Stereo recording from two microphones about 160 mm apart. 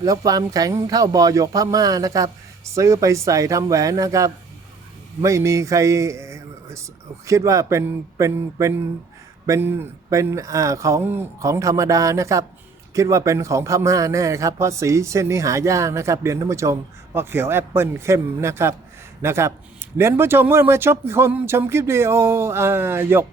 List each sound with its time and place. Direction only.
0.0 s speech: 20° right (ahead or behind)